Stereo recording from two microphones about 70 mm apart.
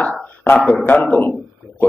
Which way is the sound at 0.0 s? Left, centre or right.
Left.